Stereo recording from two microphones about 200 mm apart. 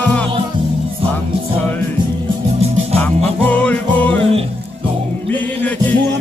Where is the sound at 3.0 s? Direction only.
5° left (ahead or behind).